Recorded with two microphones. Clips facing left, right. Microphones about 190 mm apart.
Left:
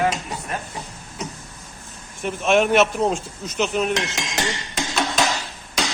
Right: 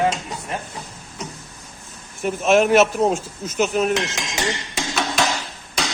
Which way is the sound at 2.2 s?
5° right (ahead or behind).